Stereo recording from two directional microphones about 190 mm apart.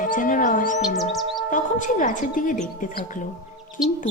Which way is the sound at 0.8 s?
Centre (ahead or behind).